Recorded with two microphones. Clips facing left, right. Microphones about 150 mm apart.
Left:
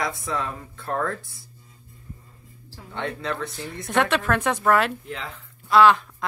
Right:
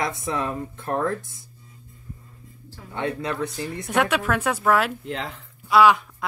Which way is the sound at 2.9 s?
10° right (ahead or behind).